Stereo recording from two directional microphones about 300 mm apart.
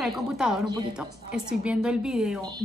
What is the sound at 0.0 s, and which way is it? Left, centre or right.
A woman's voice, centre.